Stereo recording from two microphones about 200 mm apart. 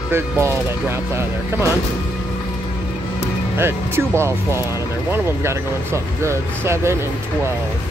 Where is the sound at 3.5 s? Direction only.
10° right (ahead or behind).